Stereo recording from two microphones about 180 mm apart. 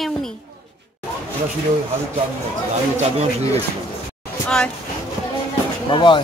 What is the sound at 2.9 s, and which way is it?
Speech, 35° right (ahead or behind).